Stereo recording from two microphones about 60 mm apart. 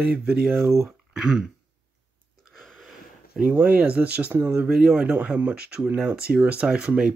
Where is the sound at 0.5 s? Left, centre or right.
Right.